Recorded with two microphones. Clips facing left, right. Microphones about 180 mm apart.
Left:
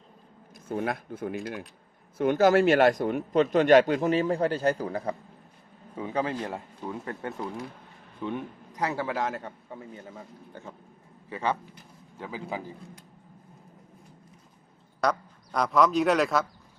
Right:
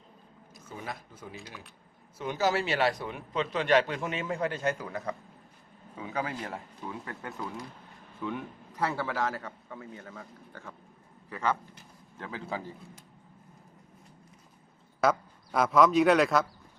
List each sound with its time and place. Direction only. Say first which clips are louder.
0.5 s a man's voice: left 10 dB; 55° left (ahead or behind); by 12.6 s 15° left (ahead or behind)
15.0 s a man's voice: right 1 dB; 5° right (ahead or behind)